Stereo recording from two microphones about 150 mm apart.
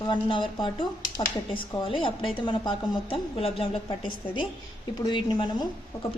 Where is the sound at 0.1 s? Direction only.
30° left (ahead or behind).